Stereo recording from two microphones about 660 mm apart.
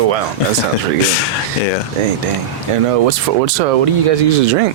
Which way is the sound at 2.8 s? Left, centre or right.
Right.